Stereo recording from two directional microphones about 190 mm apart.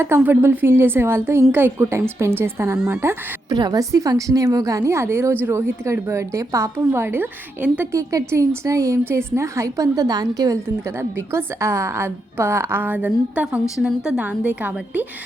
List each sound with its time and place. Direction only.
0.0 s a woman's voice: 10° right (ahead or behind)